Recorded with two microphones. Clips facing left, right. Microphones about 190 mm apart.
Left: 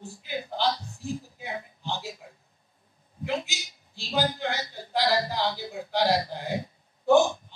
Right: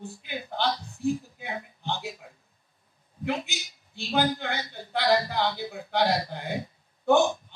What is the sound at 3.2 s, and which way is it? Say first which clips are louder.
A man's voice: even; 60° right (ahead or behind).